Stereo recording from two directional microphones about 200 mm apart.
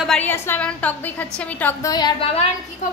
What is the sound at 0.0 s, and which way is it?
A woman's voice, 5° left (ahead or behind).